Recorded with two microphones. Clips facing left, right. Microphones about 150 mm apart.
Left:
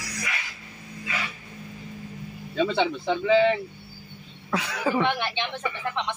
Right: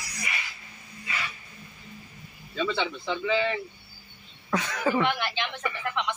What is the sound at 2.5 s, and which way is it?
Speech, 50° left (ahead or behind).